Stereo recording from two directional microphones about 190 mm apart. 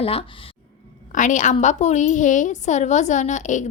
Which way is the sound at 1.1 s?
40° left (ahead or behind).